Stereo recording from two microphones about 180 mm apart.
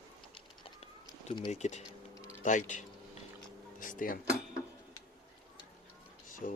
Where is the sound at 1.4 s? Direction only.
35° left (ahead or behind); by 4.2 s 50° left (ahead or behind).